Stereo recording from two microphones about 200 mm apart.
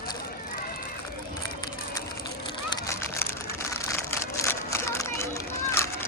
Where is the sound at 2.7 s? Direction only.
15° left (ahead or behind).